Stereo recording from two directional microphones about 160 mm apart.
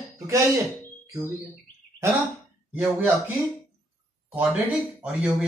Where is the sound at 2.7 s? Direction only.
10° right (ahead or behind).